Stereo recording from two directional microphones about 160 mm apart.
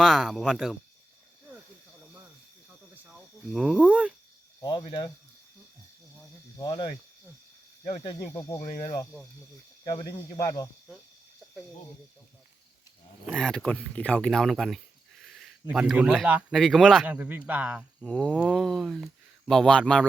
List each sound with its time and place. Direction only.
0.0 s a sound: centre (ahead or behind)
3.1 s speech: centre (ahead or behind)
4.9 s speech: 25° left (ahead or behind)
6.6 s speech: 30° left (ahead or behind)
8.3 s speech: 20° left (ahead or behind)
8.6 s speech: 55° left (ahead or behind)
9.9 s speech: 25° left (ahead or behind)
13.2 s speech: 5° left (ahead or behind)
16.6 s a sound: centre (ahead or behind)
17.1 s speech: 10° right (ahead or behind)
18.0 s a sound: 5° left (ahead or behind)